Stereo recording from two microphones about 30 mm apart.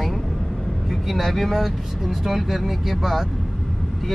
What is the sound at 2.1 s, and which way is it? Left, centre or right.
Speech, centre.